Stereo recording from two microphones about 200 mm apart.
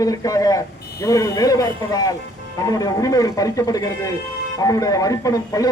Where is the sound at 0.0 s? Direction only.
15° left (ahead or behind).